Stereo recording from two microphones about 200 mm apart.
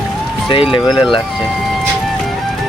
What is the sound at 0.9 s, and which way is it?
Speech, 25° left (ahead or behind).